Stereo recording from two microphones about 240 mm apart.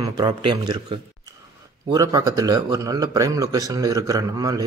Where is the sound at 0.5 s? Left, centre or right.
Right.